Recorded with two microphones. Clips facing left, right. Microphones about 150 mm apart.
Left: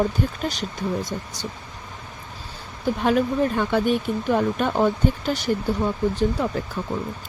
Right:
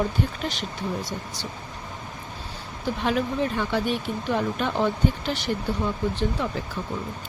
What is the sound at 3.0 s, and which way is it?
Speech, 50° left (ahead or behind).